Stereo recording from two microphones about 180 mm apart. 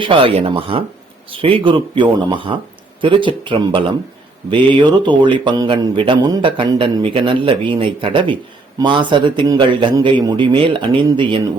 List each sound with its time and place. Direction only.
0.0 s a man's voice: 30° right (ahead or behind)